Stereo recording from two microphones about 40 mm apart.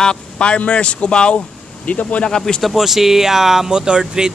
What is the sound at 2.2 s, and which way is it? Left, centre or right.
Speech, centre.